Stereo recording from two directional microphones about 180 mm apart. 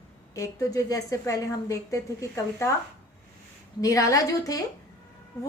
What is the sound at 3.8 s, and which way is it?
Speech, 20° left (ahead or behind).